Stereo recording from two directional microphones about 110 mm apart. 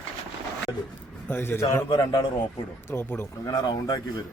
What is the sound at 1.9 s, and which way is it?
A man's voice, 35° left (ahead or behind).